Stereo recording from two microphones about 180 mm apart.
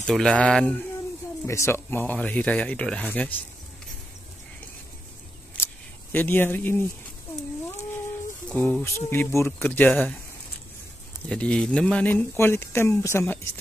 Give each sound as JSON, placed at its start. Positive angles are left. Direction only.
{"t": 0.0, "sound": "mantra", "side_deg": 5}
{"t": 1.4, "sound": "speech", "side_deg": 15}
{"t": 6.1, "sound": "speech", "side_deg": 10}
{"t": 8.5, "sound": "speech", "side_deg": 5}
{"t": 11.2, "sound": "speech", "side_deg": 5}